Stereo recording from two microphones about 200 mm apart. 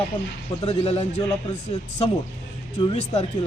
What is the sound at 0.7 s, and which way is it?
Speech, 30° left (ahead or behind).